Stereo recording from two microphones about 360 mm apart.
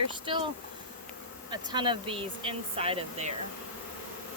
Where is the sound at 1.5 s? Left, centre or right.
Centre.